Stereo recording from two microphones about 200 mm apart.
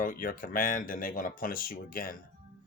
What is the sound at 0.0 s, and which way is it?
Speech, 45° left (ahead or behind).